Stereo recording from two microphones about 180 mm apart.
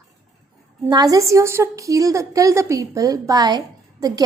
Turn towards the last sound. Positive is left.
turn(degrees=-20)  # may be behind; listen again after turning